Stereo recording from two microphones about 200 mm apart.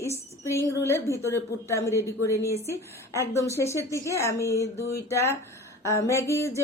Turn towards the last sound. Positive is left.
turn(degrees=15)  # may be behind; listen again after turning